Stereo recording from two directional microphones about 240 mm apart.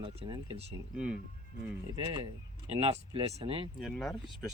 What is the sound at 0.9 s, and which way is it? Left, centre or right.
Speech, centre.